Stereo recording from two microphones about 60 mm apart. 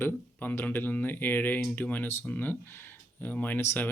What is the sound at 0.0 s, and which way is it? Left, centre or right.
Speech, left.